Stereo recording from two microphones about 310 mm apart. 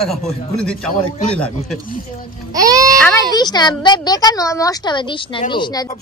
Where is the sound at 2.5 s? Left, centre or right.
Centre.